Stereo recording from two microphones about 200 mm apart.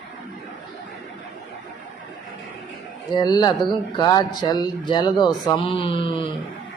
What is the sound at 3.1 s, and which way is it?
Speech, 20° left (ahead or behind).